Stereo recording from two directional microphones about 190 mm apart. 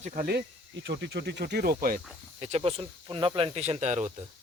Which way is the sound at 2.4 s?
35° right (ahead or behind).